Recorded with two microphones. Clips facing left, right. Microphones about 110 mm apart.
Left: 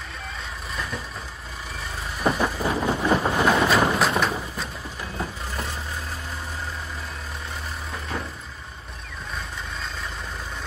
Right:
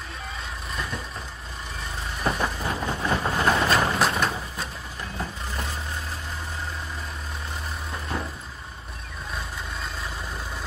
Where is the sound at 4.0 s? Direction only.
Centre (ahead or behind).